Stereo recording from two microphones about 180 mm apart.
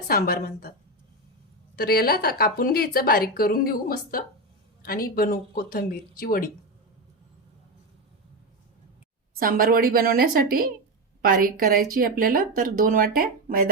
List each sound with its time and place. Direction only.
0.1 s a woman's voice: 55° left (ahead or behind)
1.7 s a woman's voice: 60° left (ahead or behind)
9.4 s a woman's voice: 55° right (ahead or behind)